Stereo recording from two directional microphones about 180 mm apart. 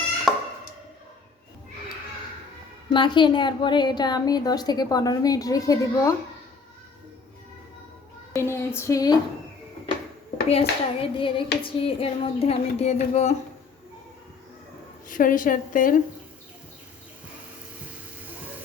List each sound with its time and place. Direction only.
0.3 s a sound: centre (ahead or behind)
2.9 s a woman's voice: 25° left (ahead or behind)
8.4 s speech: 15° left (ahead or behind)
10.5 s hands: 30° left (ahead or behind)
15.1 s a woman's voice: 50° left (ahead or behind)